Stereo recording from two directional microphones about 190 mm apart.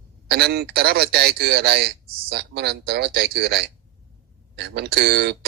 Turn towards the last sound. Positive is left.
turn(degrees=-60)  # may be behind; listen again after turning